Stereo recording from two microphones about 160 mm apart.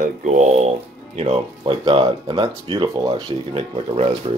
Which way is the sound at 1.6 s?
30° right (ahead or behind).